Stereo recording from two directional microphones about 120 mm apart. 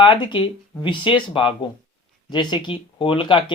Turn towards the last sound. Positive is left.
turn(degrees=40)  # may be behind; listen again after turning